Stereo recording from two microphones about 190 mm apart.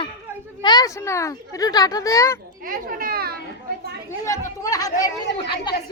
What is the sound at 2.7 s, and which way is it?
Speech, 50° right (ahead or behind).